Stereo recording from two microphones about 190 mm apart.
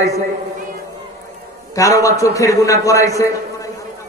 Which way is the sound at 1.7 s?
15° left (ahead or behind).